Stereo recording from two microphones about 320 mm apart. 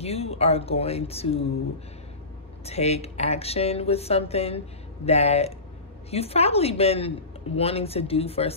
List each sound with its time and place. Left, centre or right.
0.0 s speech: centre
2.6 s speech: centre